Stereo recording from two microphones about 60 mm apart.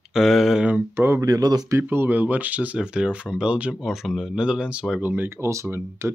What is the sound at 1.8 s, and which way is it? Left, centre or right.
Speech, right.